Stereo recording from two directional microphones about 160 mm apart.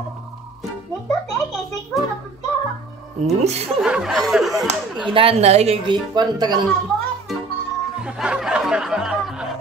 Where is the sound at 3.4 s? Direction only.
45° right (ahead or behind).